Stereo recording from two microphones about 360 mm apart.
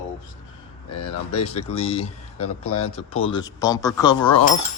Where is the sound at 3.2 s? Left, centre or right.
Centre.